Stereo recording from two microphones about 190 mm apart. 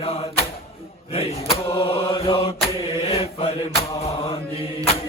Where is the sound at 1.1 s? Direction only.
30° left (ahead or behind).